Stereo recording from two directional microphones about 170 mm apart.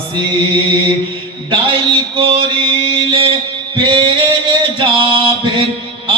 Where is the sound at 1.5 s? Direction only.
30° right (ahead or behind).